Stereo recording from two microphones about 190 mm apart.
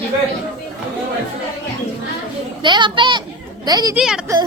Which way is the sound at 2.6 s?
25° right (ahead or behind).